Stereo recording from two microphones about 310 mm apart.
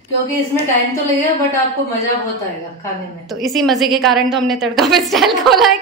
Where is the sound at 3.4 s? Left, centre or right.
Centre.